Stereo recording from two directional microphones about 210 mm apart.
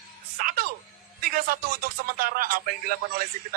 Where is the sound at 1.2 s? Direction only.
45° right (ahead or behind).